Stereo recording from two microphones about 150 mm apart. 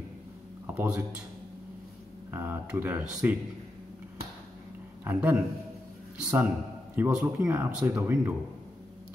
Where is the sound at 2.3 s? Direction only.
15° right (ahead or behind).